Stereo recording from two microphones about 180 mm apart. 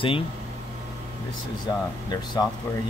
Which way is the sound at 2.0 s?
25° left (ahead or behind).